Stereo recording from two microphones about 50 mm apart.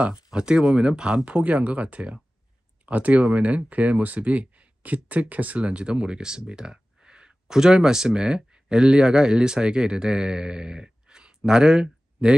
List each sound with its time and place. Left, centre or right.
0.0 s speech: right
1.2 s speech: right